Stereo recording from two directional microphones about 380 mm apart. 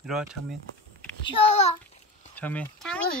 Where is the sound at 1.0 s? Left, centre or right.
Centre.